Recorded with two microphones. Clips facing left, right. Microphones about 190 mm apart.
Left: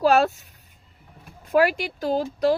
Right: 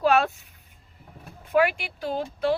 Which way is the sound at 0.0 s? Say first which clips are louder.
Left 3 dB; 35° left (ahead or behind).